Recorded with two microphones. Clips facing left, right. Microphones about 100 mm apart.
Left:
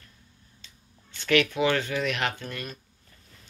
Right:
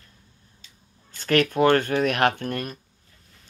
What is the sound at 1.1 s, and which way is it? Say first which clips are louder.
Speech: right 3 dB; 45° right (ahead or behind).